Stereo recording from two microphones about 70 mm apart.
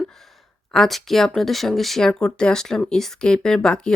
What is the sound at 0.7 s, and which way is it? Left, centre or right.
Speech, centre.